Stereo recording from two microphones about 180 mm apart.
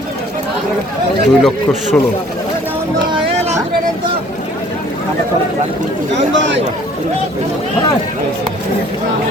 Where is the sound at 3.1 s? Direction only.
30° right (ahead or behind).